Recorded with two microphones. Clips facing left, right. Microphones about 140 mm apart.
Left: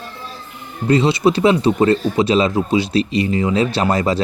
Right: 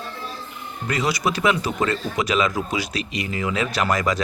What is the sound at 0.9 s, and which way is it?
Speech, 25° left (ahead or behind).